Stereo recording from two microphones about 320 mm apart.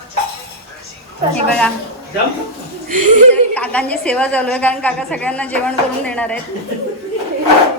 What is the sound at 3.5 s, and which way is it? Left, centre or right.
A woman's voice, centre.